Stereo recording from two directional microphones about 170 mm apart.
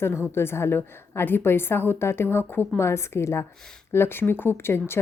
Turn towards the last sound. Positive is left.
turn(degrees=15)  # may be behind; listen again after turning